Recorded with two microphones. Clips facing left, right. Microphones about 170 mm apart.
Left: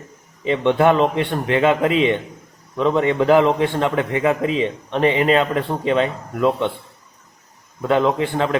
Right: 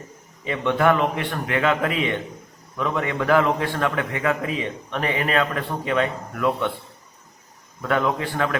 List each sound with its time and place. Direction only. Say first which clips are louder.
0.4 s a man's voice: left 4 dB; 25° left (ahead or behind)
7.8 s a man's voice: left 5 dB; 20° left (ahead or behind)